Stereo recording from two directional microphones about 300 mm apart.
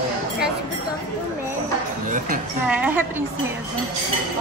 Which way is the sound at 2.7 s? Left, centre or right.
Centre.